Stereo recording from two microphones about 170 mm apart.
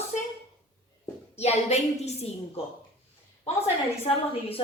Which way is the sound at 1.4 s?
40° left (ahead or behind).